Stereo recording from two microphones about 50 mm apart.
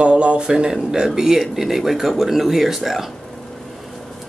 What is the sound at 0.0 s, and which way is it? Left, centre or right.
Speech, right.